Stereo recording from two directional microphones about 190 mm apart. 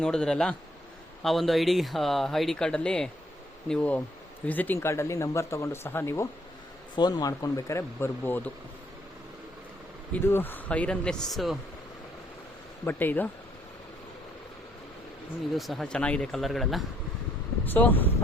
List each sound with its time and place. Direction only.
0.0 s speech: 5° left (ahead or behind)
10.1 s speech: 10° left (ahead or behind)
12.8 s speech: 10° left (ahead or behind)
15.5 s speech: centre (ahead or behind)